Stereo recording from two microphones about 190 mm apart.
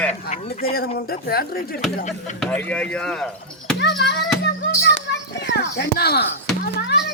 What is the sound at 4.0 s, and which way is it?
Speech, 60° left (ahead or behind).